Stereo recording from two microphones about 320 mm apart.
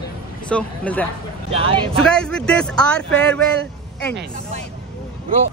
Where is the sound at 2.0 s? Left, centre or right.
Centre.